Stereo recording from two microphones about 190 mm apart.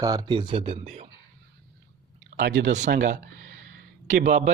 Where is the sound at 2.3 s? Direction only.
70° right (ahead or behind).